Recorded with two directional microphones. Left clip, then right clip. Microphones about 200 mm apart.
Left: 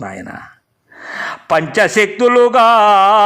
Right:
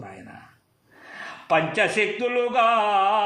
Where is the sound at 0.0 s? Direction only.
45° left (ahead or behind).